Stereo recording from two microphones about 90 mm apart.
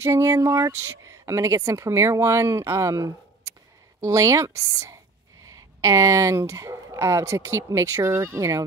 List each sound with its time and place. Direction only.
0.0 s speech: 35° right (ahead or behind)